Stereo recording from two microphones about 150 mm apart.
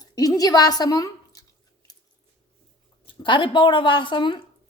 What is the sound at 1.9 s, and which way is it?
Scissors, 25° left (ahead or behind).